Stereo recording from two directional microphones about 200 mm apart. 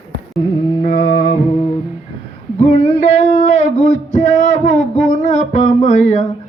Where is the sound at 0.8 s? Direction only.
40° left (ahead or behind).